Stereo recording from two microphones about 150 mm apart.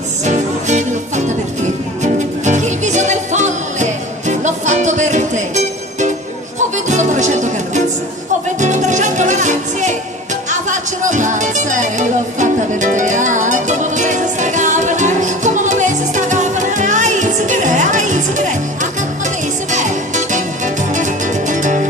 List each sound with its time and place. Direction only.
0.3 s music: 50° right (ahead or behind)